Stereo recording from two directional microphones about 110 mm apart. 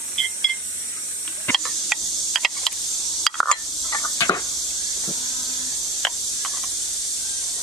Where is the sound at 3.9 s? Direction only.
30° left (ahead or behind).